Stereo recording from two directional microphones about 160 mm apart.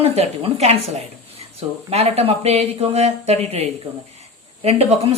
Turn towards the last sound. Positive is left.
turn(degrees=-40)  # may be behind; listen again after turning